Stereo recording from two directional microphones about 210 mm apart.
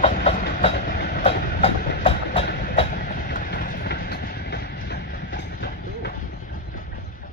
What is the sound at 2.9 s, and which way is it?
Train, 40° left (ahead or behind).